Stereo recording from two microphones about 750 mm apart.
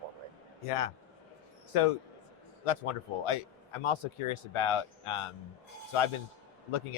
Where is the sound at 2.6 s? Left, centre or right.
Left.